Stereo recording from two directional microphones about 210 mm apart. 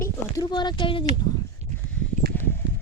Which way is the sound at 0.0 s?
20° left (ahead or behind).